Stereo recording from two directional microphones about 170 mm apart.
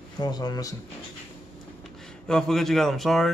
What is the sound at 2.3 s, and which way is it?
Speech, 5° left (ahead or behind).